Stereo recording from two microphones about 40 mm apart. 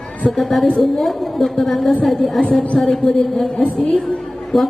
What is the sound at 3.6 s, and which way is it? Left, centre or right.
Speech, left.